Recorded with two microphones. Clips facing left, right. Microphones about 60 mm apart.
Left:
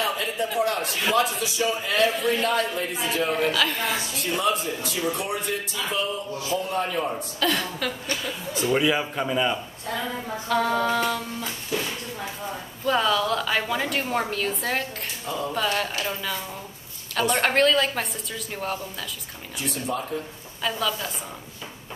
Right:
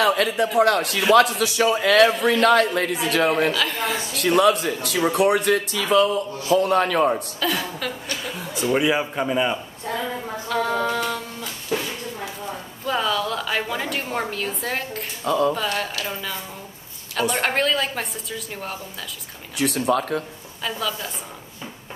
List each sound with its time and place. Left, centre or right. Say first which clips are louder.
0.0 s a man's voice: right 7 dB; right
3.5 s a woman's voice: right 1 dB; centre
4.1 s a man's voice: right 11 dB; right
7.3 s a woman's voice: even; centre
10.5 s a woman's voice: even; centre
12.8 s a woman's voice: left 1 dB; centre
19.5 s a man's voice: right 8 dB; right
20.6 s a woman's voice: left 1 dB; centre